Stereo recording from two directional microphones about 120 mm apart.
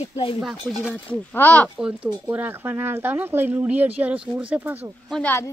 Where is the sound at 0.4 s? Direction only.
Centre (ahead or behind).